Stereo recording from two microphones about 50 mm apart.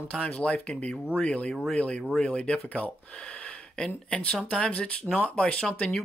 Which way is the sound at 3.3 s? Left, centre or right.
Left.